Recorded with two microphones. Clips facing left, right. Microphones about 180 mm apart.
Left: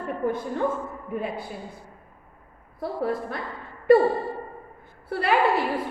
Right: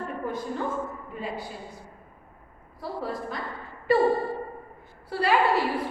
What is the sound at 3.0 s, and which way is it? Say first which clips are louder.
Speech: left 6 dB; 55° left (ahead or behind).